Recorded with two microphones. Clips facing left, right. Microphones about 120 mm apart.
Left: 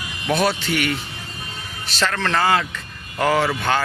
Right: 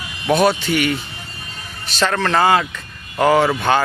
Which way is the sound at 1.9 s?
20° right (ahead or behind).